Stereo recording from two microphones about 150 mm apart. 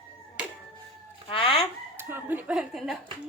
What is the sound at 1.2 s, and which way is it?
Chicken, 35° left (ahead or behind).